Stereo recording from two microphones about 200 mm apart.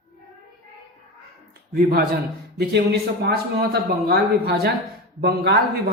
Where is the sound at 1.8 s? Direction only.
50° right (ahead or behind).